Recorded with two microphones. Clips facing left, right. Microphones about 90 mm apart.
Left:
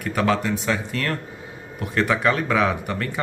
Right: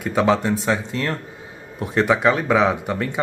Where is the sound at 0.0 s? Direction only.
25° right (ahead or behind).